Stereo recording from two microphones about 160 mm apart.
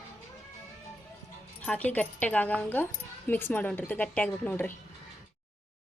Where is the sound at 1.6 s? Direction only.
10° left (ahead or behind).